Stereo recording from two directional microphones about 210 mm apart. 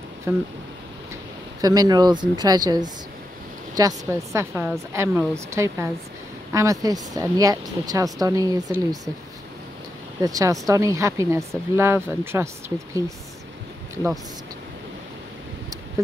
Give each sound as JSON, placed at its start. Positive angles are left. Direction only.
{"t": 0.3, "sound": "speech", "side_deg": -10}
{"t": 1.6, "sound": "speech", "side_deg": -20}
{"t": 10.2, "sound": "speech", "side_deg": -15}